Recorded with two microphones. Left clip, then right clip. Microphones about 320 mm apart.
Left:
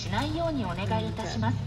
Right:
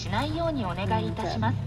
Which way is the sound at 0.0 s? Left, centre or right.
Centre.